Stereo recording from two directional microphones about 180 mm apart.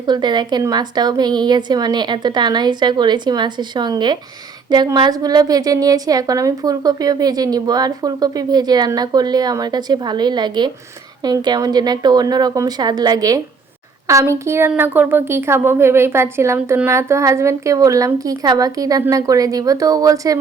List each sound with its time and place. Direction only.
0.0 s a woman's voice: 25° right (ahead or behind)